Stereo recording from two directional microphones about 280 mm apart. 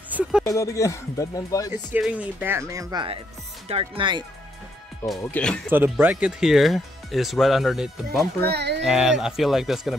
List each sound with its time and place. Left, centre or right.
0.1 s a sound: centre
0.4 s speech: centre
2.0 s speech: centre
5.0 s speech: centre
5.7 s speech: centre
8.5 s speech: right
8.8 s speech: centre